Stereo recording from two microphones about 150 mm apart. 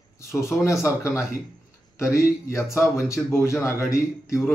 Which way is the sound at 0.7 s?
20° left (ahead or behind).